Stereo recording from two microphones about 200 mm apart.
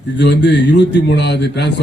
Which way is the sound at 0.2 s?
60° left (ahead or behind).